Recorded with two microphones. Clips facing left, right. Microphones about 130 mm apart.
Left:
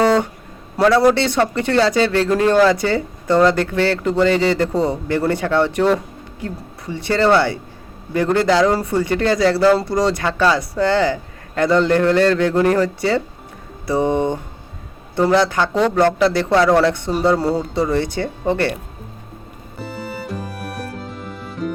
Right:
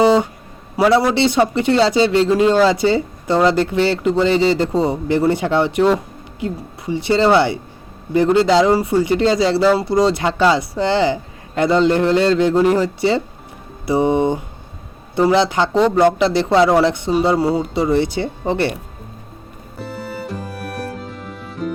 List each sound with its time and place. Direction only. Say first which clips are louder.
0.0 s music: right 2 dB; 15° right (ahead or behind)
0.8 s speech: even; 10° right (ahead or behind)
19.8 s music: right 1 dB; centre (ahead or behind)